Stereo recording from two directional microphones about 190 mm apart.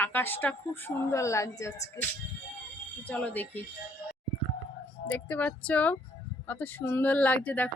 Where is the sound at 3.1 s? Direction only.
10° left (ahead or behind).